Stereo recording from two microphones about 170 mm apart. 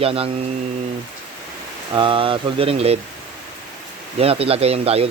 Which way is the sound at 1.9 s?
30° right (ahead or behind).